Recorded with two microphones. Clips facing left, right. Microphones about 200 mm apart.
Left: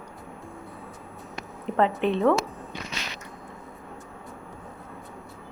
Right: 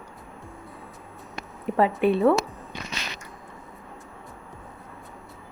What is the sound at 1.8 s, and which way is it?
Speech, 10° right (ahead or behind).